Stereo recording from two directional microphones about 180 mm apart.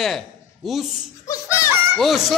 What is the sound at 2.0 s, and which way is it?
Speech, centre (ahead or behind).